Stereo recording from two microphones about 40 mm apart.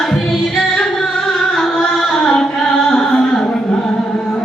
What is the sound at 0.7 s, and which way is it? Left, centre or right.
Singing, centre.